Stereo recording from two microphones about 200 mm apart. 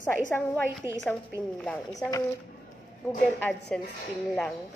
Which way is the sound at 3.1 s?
5° left (ahead or behind).